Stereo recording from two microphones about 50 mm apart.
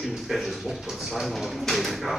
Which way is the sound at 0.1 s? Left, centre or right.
Centre.